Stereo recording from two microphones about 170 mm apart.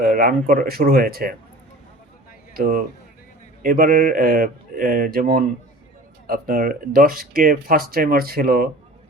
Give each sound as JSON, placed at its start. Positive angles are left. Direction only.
{"t": 0.0, "sound": "speech", "side_deg": -55}
{"t": 2.6, "sound": "a man's voice", "side_deg": -55}